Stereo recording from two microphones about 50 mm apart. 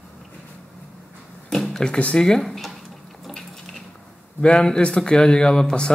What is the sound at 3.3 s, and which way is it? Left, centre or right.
Dishes, centre.